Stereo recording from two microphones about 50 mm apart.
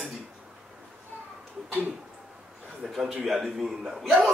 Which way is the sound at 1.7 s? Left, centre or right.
Right.